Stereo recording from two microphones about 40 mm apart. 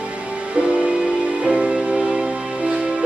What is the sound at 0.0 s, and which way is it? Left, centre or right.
Music, right.